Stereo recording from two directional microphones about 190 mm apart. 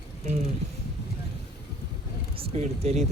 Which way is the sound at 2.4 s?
35° right (ahead or behind).